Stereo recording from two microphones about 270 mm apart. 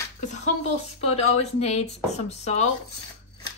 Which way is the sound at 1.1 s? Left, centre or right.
Left.